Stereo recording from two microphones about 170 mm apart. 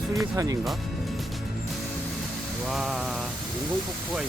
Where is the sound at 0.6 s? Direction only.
Centre (ahead or behind).